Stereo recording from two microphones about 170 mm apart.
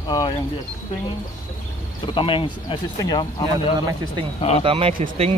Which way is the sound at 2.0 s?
30° left (ahead or behind).